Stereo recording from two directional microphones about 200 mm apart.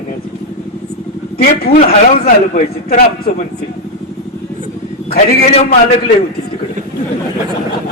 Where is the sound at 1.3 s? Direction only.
50° left (ahead or behind).